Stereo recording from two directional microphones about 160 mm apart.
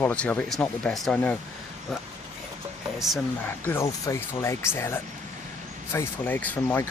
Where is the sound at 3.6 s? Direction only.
15° left (ahead or behind).